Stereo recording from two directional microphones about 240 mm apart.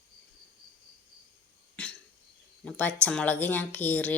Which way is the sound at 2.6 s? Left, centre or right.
Centre.